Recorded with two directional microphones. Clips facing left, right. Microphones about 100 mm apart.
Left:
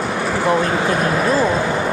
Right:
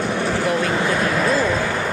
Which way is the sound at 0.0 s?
5° left (ahead or behind).